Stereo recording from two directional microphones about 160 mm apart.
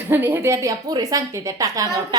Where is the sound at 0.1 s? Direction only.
15° right (ahead or behind).